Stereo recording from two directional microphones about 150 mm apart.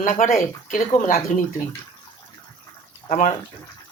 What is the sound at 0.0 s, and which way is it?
Speech, 60° left (ahead or behind).